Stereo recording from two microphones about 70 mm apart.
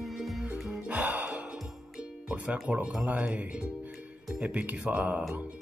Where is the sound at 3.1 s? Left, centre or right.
Centre.